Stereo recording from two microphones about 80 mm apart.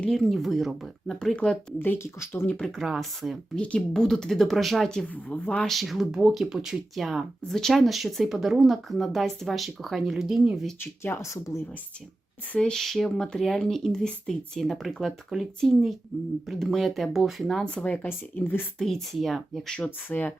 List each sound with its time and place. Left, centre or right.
0.1 s speech: centre
1.8 s speech: left
2.0 s speech: left
2.6 s speech: centre
5.0 s speech: centre
5.6 s speech: centre
10.8 s speech: left
11.3 s speech: left
12.5 s speech: centre; by 18.6 s left
18.8 s speech: centre
19.7 s speech: left